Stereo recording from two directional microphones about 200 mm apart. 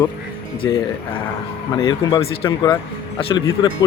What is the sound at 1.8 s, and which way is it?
Speech, 20° left (ahead or behind).